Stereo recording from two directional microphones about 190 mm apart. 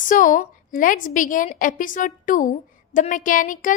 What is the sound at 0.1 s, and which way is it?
A woman's voice, 45° left (ahead or behind).